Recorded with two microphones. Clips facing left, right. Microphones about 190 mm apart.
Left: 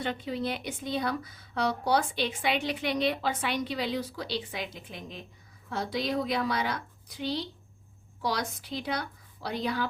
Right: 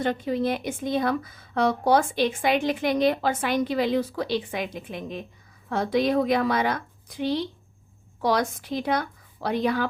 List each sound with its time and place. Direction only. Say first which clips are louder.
0.0 s speech: right 7 dB; 45° right (ahead or behind)